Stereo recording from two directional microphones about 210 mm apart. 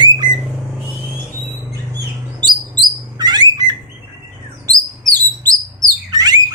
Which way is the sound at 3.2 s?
20° right (ahead or behind).